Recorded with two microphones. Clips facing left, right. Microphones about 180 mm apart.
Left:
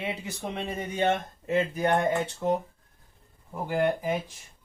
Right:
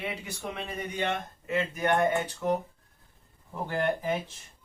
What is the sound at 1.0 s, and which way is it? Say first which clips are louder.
Speech: left 7 dB; 35° left (ahead or behind).